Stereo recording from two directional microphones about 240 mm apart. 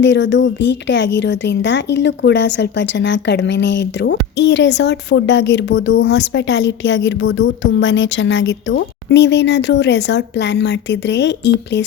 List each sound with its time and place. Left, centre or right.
0.0 s a woman's voice: left